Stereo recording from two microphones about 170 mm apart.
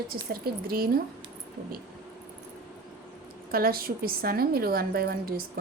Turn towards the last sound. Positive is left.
turn(degrees=-65)  # may be behind; listen again after turning